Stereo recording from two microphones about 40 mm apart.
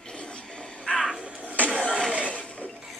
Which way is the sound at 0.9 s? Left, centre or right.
Left.